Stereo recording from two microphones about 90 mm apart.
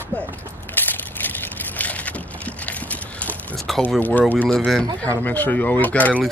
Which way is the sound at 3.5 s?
5° left (ahead or behind).